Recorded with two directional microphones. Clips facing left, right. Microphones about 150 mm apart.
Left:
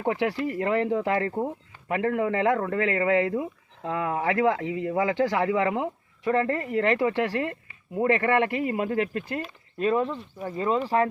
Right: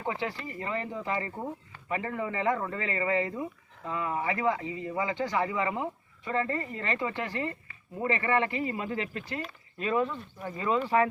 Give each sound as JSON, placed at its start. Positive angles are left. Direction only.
{"t": 0.0, "sound": "a man's voice", "side_deg": 70}
{"t": 6.2, "sound": "a man's voice", "side_deg": 70}
{"t": 8.0, "sound": "speech", "side_deg": 65}
{"t": 9.7, "sound": "speech", "side_deg": 40}